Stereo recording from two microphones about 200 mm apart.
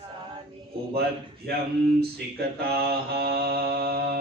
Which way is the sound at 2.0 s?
50° right (ahead or behind).